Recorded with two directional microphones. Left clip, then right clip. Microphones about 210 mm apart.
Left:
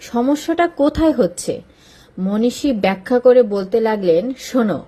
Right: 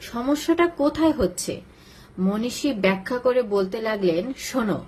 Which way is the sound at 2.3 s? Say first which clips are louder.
Left 8 dB; 20° left (ahead or behind).